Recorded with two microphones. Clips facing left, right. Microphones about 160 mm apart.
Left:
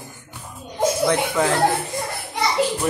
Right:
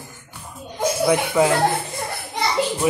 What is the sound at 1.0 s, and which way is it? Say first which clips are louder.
Speech: right 5 dB; 10° right (ahead or behind).